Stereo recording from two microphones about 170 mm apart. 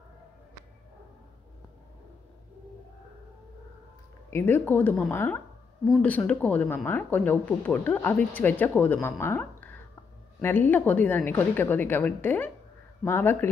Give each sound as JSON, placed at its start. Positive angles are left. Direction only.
{"t": 4.3, "sound": "speech", "side_deg": 15}